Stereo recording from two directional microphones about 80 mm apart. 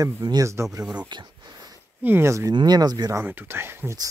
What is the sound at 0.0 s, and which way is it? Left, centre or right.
Speech, right.